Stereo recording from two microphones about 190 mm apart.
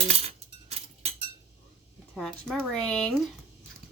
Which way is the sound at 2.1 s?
Centre (ahead or behind).